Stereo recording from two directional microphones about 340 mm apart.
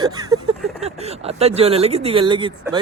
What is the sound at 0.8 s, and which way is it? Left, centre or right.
Speech, centre.